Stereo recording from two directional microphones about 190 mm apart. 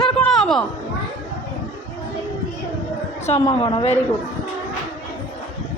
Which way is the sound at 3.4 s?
25° left (ahead or behind).